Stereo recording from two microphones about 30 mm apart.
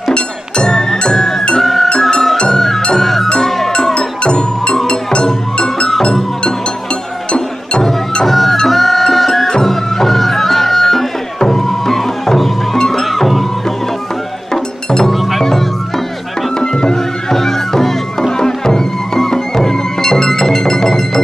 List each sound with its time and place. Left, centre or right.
0.0 s music: left
3.9 s music: left
8.3 s music: centre
13.1 s music: centre
14.5 s music: left
15.0 s music: centre
16.5 s music: left